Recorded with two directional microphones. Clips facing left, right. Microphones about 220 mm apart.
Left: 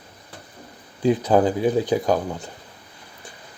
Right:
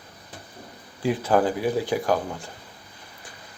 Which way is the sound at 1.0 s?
20° left (ahead or behind).